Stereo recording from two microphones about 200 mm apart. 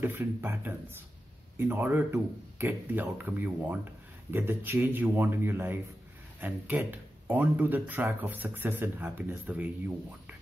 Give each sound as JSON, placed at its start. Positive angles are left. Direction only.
{"t": 0.0, "sound": "speech", "side_deg": -10}